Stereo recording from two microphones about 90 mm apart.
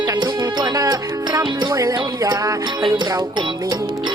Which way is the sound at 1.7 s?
45° right (ahead or behind).